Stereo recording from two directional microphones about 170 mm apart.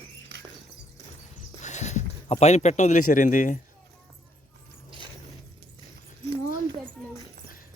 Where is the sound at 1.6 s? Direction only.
45° left (ahead or behind).